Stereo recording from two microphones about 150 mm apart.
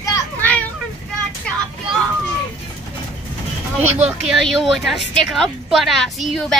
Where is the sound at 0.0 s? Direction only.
20° left (ahead or behind).